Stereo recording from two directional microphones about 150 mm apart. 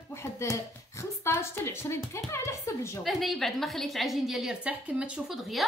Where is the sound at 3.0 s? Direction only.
Centre (ahead or behind).